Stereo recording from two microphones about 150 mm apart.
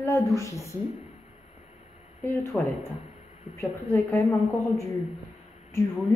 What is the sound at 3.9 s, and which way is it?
Speech, 15° left (ahead or behind).